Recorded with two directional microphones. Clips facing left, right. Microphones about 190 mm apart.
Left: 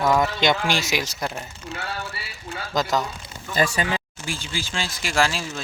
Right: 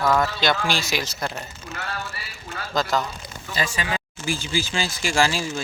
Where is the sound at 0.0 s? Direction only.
20° left (ahead or behind).